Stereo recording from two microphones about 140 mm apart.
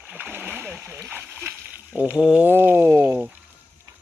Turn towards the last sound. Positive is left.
turn(degrees=-15)  # may be behind; listen again after turning